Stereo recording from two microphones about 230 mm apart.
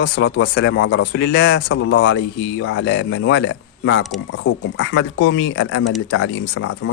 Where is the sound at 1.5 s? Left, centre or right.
Left.